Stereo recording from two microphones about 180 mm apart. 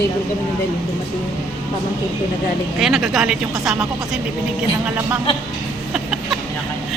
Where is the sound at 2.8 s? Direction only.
Centre (ahead or behind).